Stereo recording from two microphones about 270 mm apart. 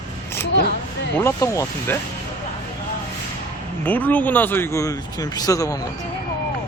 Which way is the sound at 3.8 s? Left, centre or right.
Centre.